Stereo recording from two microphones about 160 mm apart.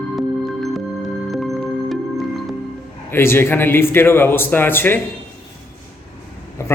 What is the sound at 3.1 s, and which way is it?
A man's voice, 15° left (ahead or behind).